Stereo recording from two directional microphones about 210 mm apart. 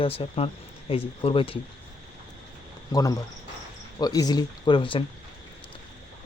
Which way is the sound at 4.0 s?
20° left (ahead or behind).